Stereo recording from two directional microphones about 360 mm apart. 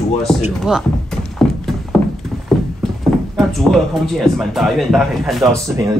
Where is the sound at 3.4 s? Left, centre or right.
Centre.